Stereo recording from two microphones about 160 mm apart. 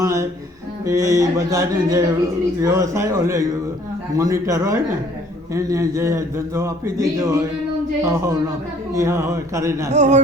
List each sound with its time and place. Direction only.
0.0 s speech: 20° right (ahead or behind)
9.9 s speech: 45° right (ahead or behind)